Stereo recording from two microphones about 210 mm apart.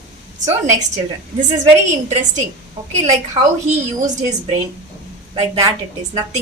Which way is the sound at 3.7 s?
35° right (ahead or behind).